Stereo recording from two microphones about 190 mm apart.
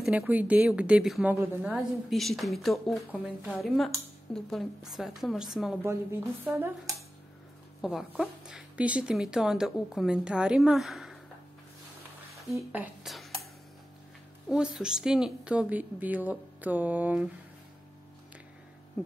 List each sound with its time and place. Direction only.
0.0 s a woman's voice: 5° right (ahead or behind)
12.4 s speech: 5° right (ahead or behind)
14.5 s a woman's voice: 5° right (ahead or behind)